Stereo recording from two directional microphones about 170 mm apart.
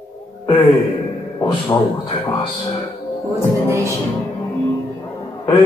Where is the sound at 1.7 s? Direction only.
25° left (ahead or behind).